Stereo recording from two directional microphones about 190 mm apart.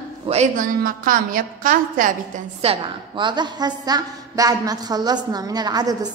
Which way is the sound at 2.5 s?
30° right (ahead or behind).